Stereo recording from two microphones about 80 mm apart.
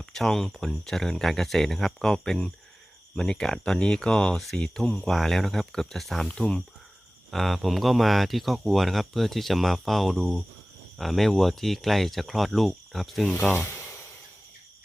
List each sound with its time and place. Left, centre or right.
0.0 s speech: centre
13.5 s speech: left